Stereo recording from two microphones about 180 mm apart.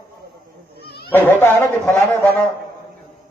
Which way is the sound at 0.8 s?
65° left (ahead or behind).